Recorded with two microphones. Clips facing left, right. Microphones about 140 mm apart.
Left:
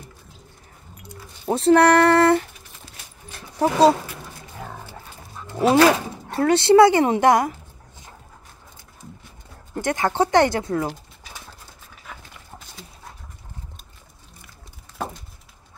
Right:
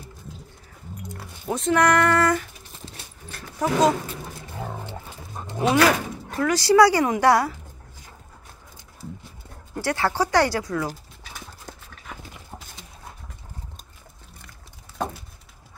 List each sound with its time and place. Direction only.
1.5 s female singing: 30° left (ahead or behind)
3.5 s speech: 30° left (ahead or behind)
4.6 s roaring cats: 20° right (ahead or behind)
5.4 s a sound: 45° right (ahead or behind)
5.8 s speech: 30° left (ahead or behind)
9.8 s speech: 20° left (ahead or behind)
15.0 s a sound: 5° left (ahead or behind)